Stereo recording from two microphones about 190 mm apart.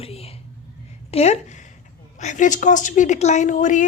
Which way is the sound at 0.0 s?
30° left (ahead or behind).